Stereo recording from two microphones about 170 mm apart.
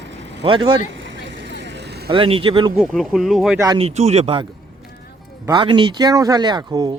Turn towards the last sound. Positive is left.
turn(degrees=-25)  # may be behind; listen again after turning